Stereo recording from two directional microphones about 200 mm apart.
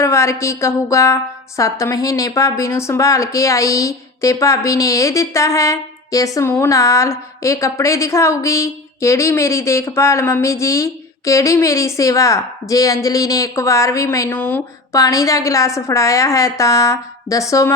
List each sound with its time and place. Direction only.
0.0 s a woman's voice: 15° left (ahead or behind)